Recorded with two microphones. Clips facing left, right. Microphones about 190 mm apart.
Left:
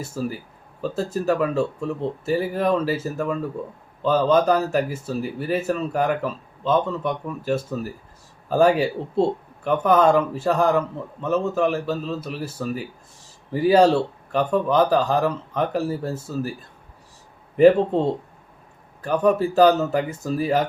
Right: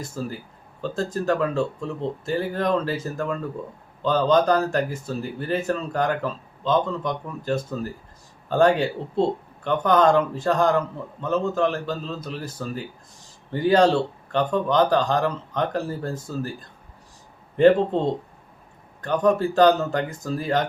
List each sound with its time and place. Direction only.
0.0 s a man's voice: 5° left (ahead or behind)